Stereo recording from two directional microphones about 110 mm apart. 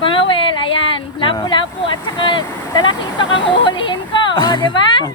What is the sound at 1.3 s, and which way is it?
Speech, 45° left (ahead or behind).